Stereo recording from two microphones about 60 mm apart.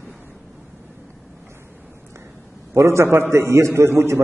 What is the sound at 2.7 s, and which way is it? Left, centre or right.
A man's voice, right.